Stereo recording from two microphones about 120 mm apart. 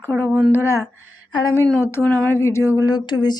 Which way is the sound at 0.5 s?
25° left (ahead or behind).